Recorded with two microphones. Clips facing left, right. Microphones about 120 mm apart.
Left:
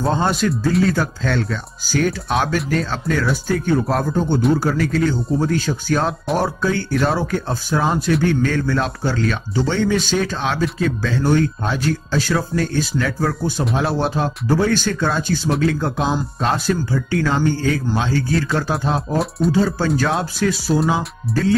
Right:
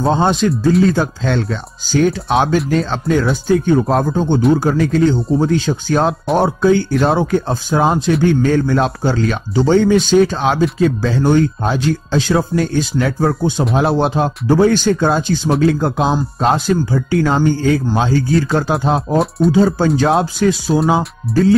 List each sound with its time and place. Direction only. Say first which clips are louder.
0.0 s a man's voice: right 4 dB; 25° right (ahead or behind)
19.1 s speech: right 5 dB; centre (ahead or behind)
19.5 s speech: right 5 dB; 25° right (ahead or behind)
21.3 s speech: right 7 dB; centre (ahead or behind)